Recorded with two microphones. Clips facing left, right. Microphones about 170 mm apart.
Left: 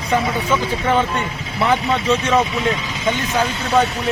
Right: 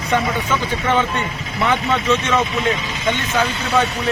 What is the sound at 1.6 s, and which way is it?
Speech, 35° left (ahead or behind).